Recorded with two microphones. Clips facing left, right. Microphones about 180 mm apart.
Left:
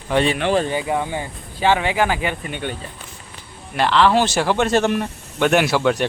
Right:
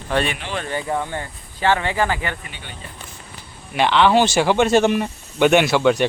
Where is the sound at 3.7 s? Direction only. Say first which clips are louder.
Right 1 dB; centre (ahead or behind).